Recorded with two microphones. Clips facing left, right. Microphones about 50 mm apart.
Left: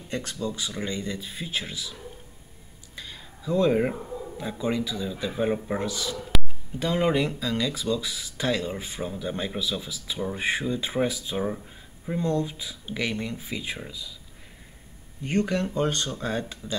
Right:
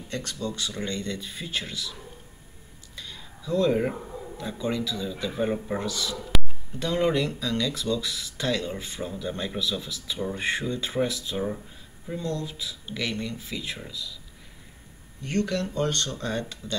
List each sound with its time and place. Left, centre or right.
0.1 s speech: centre
3.0 s a sound: centre
4.4 s speech: centre
6.3 s a sound: centre
6.8 s speech: centre
12.1 s speech: left
15.2 s speech: centre